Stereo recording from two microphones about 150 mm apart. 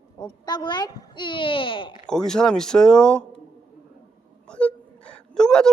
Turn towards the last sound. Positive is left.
turn(degrees=5)  # may be behind; listen again after turning